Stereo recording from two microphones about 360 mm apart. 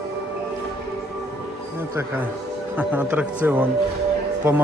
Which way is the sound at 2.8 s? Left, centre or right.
Centre.